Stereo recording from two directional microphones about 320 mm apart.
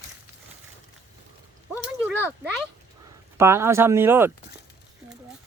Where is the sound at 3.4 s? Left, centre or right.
Centre.